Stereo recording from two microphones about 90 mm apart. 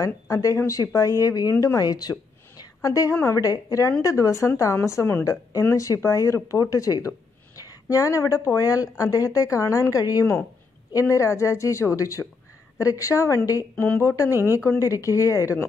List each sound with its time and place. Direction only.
0.0 s speech: 40° left (ahead or behind)
13.7 s a woman's voice: 20° left (ahead or behind)
14.0 s speech: 35° left (ahead or behind)
14.3 s speech: 25° right (ahead or behind)
14.8 s speech: 35° left (ahead or behind)